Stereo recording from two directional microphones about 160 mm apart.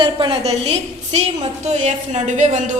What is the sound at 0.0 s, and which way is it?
A woman's voice, 35° right (ahead or behind).